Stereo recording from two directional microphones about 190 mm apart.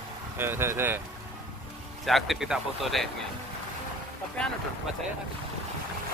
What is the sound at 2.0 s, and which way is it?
Speech, centre (ahead or behind).